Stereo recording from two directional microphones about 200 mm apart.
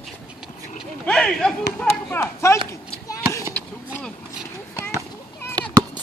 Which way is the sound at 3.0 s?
15° left (ahead or behind).